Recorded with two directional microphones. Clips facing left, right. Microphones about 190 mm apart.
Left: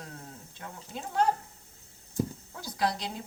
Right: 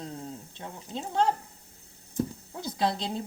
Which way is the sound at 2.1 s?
20° right (ahead or behind).